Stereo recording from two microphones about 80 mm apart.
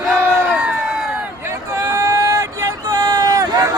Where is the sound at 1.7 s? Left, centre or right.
Right.